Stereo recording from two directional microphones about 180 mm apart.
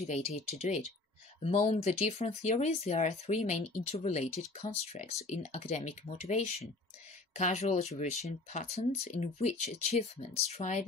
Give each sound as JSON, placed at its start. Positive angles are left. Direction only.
{"t": 0.0, "sound": "speech", "side_deg": 35}